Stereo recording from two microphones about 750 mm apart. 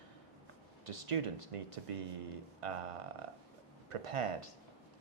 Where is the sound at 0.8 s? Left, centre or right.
Right.